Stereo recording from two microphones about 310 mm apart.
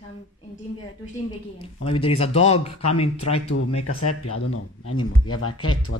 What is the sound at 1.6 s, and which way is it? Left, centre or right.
Speech, centre.